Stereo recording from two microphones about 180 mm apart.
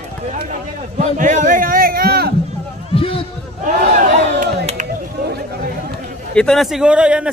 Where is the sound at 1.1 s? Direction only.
45° right (ahead or behind).